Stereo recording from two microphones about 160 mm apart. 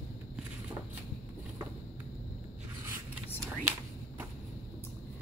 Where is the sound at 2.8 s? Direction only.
15° right (ahead or behind).